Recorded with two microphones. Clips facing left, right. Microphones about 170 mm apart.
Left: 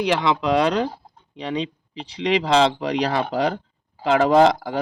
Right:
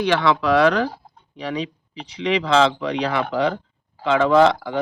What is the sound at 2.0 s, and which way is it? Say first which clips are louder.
Speech: left 1 dB; 30° left (ahead or behind).